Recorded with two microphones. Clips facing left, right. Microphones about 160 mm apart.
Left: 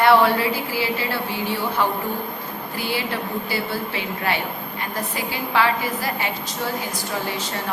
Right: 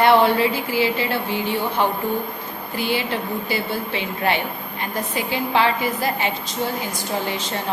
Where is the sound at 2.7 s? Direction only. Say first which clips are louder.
Right 3 dB; 20° right (ahead or behind).